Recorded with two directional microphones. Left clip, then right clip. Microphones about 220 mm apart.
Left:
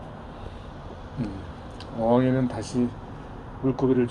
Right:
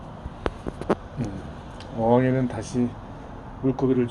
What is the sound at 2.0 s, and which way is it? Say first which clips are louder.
Speech: right 1 dB; 15° right (ahead or behind).